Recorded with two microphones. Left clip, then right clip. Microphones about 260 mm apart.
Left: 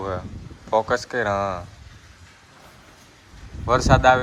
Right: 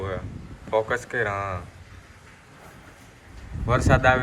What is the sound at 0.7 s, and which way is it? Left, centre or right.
Speech, centre.